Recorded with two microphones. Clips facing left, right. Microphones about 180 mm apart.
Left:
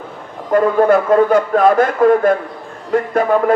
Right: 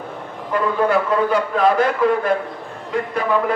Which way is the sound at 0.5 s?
45° left (ahead or behind).